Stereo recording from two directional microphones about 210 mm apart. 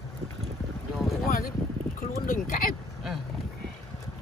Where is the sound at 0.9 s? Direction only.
Centre (ahead or behind).